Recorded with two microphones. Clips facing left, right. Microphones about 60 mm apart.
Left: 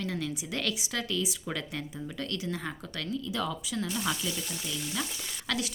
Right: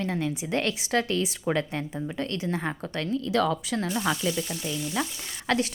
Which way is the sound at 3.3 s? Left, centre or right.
Right.